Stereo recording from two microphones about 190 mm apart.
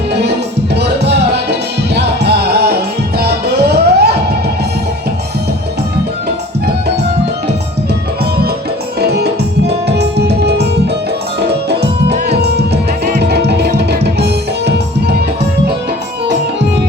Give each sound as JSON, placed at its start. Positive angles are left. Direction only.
{"t": 0.1, "sound": "music", "side_deg": -60}
{"t": 9.0, "sound": "music", "side_deg": -60}
{"t": 12.4, "sound": "music", "side_deg": -60}